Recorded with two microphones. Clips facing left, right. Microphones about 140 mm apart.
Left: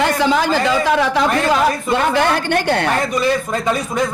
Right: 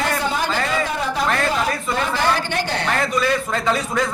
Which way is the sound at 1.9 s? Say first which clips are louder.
Left 3 dB; 60° left (ahead or behind).